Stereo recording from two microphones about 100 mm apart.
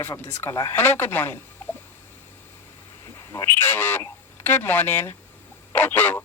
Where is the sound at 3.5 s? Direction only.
20° left (ahead or behind).